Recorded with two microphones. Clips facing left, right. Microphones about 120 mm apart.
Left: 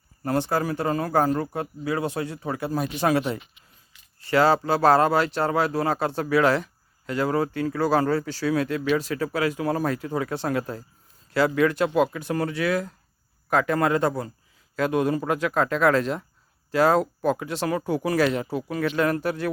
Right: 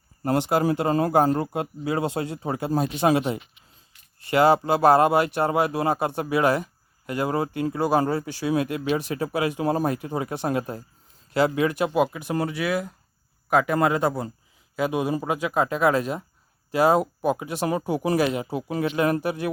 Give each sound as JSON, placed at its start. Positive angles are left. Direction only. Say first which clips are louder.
{"t": 0.3, "sound": "speech", "louder": "right 3 dB", "side_deg": -20}